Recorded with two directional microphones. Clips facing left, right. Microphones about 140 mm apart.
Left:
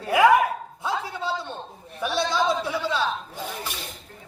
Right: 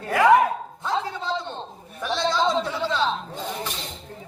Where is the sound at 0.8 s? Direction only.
10° left (ahead or behind).